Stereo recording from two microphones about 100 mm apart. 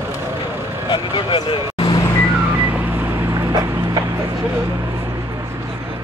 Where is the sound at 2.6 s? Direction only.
20° right (ahead or behind).